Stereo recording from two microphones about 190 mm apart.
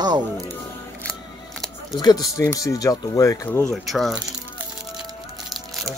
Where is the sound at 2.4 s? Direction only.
15° left (ahead or behind).